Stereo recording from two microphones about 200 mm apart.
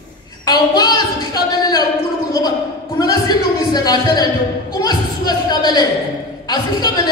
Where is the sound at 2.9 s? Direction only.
20° left (ahead or behind).